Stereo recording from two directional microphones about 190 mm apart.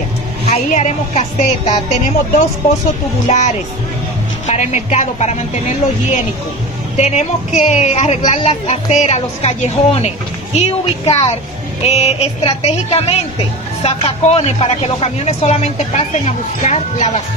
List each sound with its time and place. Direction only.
0.5 s speech: 35° left (ahead or behind)
7.0 s speech: 35° left (ahead or behind)